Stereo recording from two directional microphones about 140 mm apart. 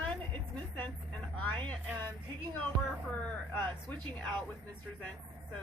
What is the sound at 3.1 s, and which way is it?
Speech, 10° left (ahead or behind).